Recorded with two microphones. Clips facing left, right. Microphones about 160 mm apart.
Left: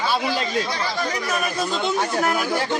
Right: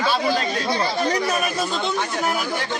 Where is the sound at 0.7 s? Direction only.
25° right (ahead or behind).